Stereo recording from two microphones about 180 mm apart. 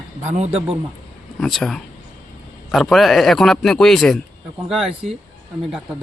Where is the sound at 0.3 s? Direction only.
40° right (ahead or behind).